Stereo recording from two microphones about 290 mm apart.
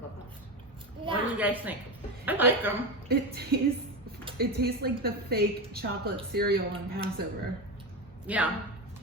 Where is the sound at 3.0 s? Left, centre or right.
Right.